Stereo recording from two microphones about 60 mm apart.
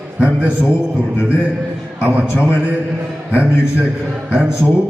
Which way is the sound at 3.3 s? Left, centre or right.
Right.